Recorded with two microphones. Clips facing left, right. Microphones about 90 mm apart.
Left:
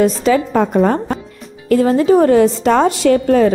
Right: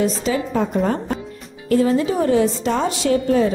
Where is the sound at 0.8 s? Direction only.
90° left.